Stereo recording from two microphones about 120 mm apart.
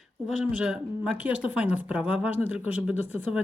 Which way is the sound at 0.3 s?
10° right (ahead or behind).